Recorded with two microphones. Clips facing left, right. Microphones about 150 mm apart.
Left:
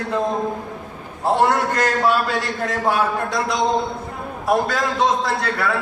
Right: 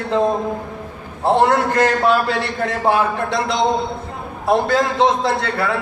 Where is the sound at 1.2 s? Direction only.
25° right (ahead or behind).